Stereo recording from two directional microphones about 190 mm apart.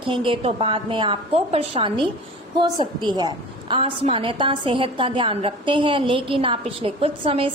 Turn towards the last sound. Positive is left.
turn(degrees=-30)  # may be behind; listen again after turning